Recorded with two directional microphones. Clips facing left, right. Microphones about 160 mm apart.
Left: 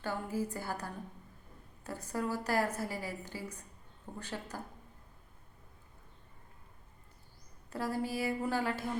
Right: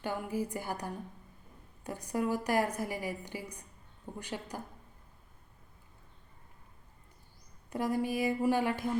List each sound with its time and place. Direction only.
0.0 s a woman's voice: 15° right (ahead or behind)
7.7 s a woman's voice: 15° right (ahead or behind)